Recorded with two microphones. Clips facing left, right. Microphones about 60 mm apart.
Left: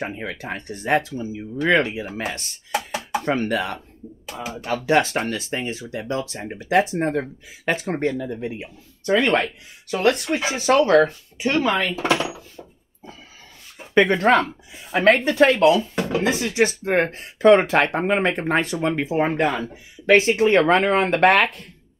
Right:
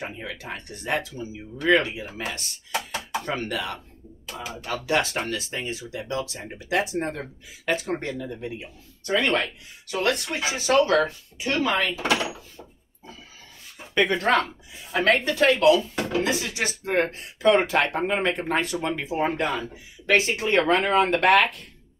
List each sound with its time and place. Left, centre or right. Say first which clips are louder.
0.0 s speech: left 5 dB; left
13.9 s speech: left 5 dB; left